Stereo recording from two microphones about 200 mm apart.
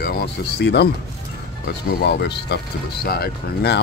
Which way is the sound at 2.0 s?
55° left (ahead or behind).